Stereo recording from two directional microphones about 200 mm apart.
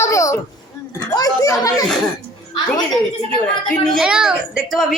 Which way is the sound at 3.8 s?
Centre (ahead or behind).